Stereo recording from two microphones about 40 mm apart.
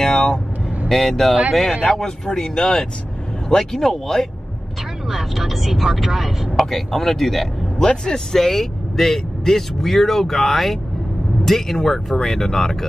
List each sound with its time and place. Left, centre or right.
0.0 s vehicle: centre
0.8 s speech: centre
1.9 s speech: centre
3.4 s speech: centre
5.1 s speech: centre
6.6 s speech: centre
7.8 s speech: centre
8.4 s speech: centre